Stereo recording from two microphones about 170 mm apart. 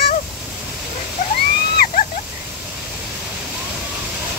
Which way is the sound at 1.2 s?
50° left (ahead or behind).